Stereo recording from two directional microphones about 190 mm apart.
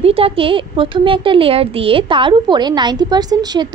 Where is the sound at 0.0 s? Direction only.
30° right (ahead or behind).